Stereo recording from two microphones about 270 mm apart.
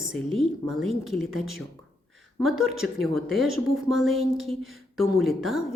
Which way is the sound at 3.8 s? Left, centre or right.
Centre.